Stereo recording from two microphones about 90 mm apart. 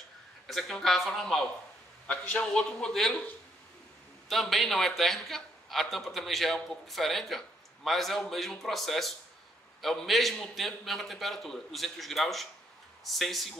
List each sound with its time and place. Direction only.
0.5 s a man's voice: 5° left (ahead or behind)
4.3 s a man's voice: centre (ahead or behind)